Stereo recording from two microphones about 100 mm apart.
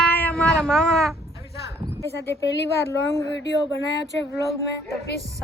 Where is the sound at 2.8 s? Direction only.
30° left (ahead or behind).